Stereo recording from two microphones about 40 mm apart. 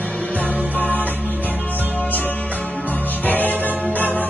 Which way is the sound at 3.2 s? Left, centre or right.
Left.